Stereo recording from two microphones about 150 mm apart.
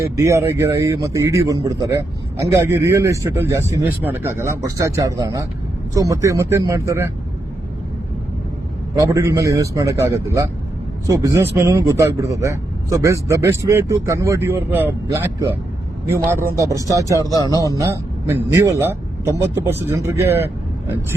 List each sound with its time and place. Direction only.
0.0 s speech: 20° right (ahead or behind)
9.0 s a man's voice: 20° right (ahead or behind)